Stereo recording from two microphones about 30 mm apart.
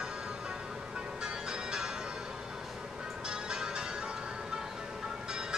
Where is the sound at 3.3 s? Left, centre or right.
Right.